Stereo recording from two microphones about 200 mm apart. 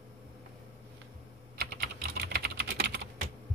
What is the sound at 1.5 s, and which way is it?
Typing, 50° right (ahead or behind).